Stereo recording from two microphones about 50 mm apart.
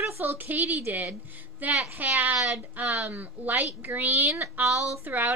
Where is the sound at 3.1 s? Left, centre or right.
Right.